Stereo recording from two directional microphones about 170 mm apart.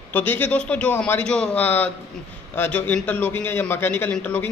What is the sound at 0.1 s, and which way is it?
A man's voice, 10° left (ahead or behind).